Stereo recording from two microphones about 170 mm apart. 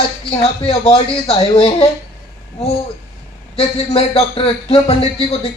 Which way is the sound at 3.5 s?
35° left (ahead or behind).